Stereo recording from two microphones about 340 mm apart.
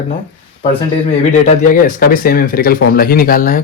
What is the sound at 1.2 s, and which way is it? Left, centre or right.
Speech, left.